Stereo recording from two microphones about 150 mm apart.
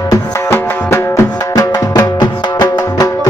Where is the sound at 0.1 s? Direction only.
15° left (ahead or behind).